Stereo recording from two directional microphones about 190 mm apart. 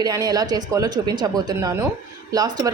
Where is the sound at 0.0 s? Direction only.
20° right (ahead or behind).